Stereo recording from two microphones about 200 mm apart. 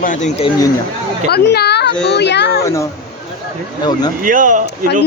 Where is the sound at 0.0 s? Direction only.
40° left (ahead or behind).